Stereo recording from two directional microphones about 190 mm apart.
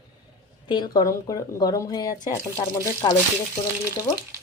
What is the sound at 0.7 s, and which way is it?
Speech, 20° left (ahead or behind).